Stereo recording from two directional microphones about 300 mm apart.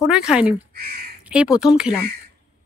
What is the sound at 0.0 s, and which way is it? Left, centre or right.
Speech, centre.